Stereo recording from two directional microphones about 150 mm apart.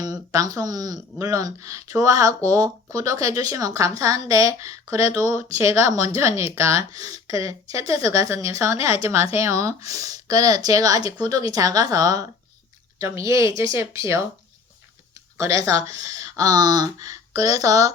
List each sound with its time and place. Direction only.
0.0 s speech: 25° right (ahead or behind)
15.4 s speech: 20° right (ahead or behind)